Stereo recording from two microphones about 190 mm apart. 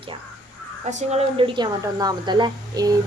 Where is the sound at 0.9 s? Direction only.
35° right (ahead or behind).